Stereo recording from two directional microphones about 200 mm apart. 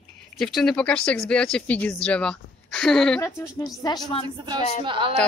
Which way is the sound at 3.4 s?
15° left (ahead or behind).